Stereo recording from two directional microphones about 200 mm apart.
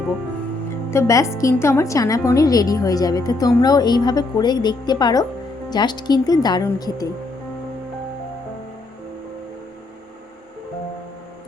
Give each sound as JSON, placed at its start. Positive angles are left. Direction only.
{"t": 0.9, "sound": "a woman's voice", "side_deg": 15}